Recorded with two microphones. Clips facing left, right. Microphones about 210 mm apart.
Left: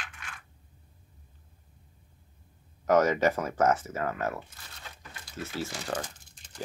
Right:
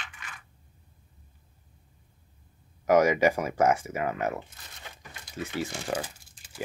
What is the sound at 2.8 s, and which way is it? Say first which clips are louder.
Speech: right 2 dB; 10° right (ahead or behind).